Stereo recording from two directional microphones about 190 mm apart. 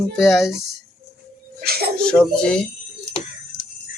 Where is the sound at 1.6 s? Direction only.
55° right (ahead or behind).